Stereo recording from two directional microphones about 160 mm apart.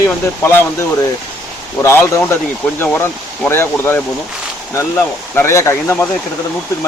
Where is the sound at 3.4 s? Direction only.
15° left (ahead or behind).